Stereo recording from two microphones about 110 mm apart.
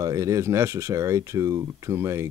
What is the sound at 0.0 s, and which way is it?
Speech, 30° right (ahead or behind).